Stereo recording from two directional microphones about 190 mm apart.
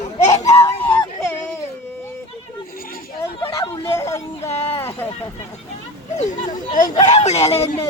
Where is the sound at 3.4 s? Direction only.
15° left (ahead or behind).